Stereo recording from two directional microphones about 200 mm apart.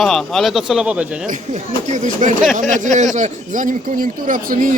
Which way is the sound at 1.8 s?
40° right (ahead or behind).